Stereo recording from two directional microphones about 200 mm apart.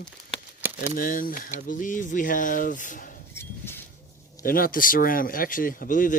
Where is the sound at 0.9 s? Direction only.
45° left (ahead or behind).